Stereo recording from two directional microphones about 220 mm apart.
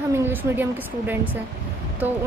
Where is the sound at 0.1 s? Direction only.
10° right (ahead or behind).